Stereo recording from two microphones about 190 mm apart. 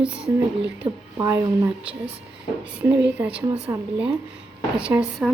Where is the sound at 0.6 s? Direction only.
75° right (ahead or behind).